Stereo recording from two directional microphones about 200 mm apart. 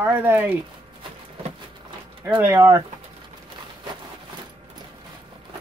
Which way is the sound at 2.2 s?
10° right (ahead or behind).